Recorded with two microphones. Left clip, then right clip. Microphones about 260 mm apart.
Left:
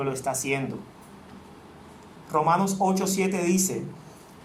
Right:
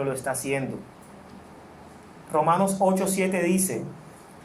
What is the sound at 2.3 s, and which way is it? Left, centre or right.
Speech, left.